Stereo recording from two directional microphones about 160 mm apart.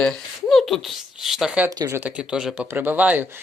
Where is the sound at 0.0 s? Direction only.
5° left (ahead or behind).